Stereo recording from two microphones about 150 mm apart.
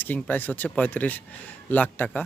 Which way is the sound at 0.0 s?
10° left (ahead or behind).